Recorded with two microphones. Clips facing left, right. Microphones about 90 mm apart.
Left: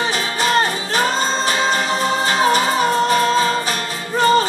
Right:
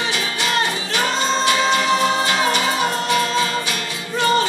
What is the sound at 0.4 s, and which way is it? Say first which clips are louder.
Music: left 5 dB; 40° left (ahead or behind).